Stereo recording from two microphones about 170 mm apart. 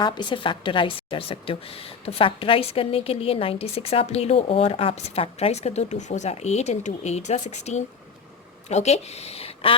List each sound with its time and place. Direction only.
0.0 s a woman's voice: 25° left (ahead or behind)